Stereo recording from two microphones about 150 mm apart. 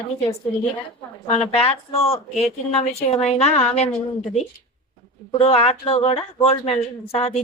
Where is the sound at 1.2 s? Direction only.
45° left (ahead or behind).